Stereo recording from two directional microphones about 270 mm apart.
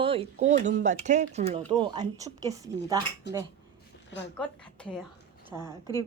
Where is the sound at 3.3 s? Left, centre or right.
Left.